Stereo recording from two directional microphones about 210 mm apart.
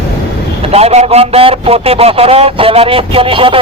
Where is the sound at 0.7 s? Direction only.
30° right (ahead or behind).